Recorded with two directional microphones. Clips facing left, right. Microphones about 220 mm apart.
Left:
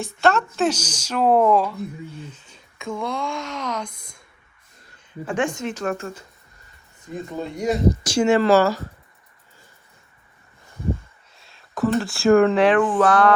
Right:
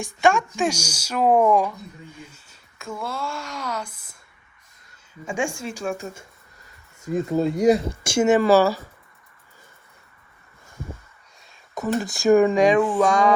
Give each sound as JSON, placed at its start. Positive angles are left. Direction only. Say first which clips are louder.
{"t": 0.0, "sound": "speech", "louder": "even", "side_deg": -15}
{"t": 5.3, "sound": "speech", "louder": "left 3 dB", "side_deg": -10}
{"t": 7.1, "sound": "speech", "louder": "right 8 dB", "side_deg": -40}
{"t": 7.4, "sound": "speech", "louder": "right 6 dB", "side_deg": 0}
{"t": 8.2, "sound": "speech", "louder": "even", "side_deg": -15}
{"t": 11.9, "sound": "speech", "louder": "left 1 dB", "side_deg": 0}
{"t": 12.4, "sound": "speech", "louder": "left 1 dB", "side_deg": -15}